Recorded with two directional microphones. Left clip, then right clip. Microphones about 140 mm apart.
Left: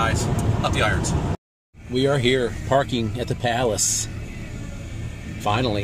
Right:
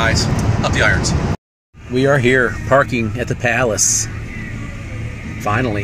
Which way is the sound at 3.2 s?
15° right (ahead or behind).